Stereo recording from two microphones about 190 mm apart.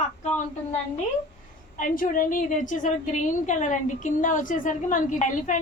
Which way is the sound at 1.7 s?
45° left (ahead or behind).